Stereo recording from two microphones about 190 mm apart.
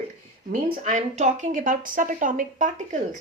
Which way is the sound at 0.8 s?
40° right (ahead or behind).